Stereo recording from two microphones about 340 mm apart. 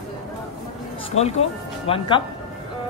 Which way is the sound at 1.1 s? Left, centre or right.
Left.